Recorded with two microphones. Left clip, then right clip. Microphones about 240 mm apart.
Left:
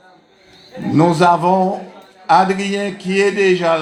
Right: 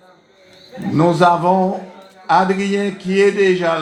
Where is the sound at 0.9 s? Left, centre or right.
Left.